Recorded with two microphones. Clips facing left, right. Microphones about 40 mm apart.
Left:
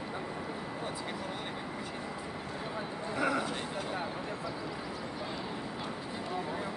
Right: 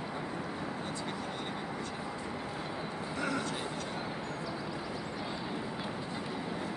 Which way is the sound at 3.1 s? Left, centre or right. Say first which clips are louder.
Left 4 dB; centre.